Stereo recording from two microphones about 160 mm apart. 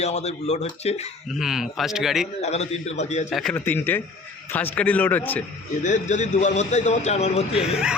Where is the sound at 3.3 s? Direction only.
Centre (ahead or behind).